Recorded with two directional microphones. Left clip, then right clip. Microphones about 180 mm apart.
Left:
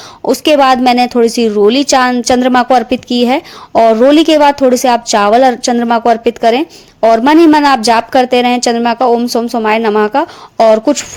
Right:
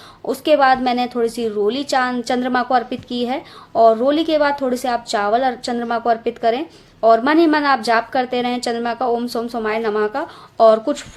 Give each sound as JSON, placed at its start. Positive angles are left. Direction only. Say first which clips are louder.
{"t": 0.3, "sound": "a woman's voice", "louder": "left 6 dB", "side_deg": 45}